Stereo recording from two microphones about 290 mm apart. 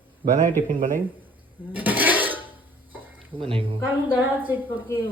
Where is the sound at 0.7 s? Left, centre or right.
Right.